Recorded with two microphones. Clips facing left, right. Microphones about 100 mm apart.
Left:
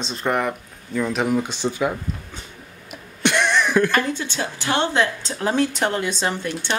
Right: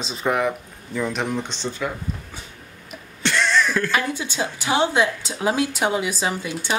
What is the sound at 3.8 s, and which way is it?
A woman's voice, 10° right (ahead or behind).